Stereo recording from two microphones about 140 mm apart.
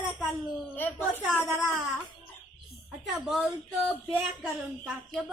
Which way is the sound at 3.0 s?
Centre (ahead or behind).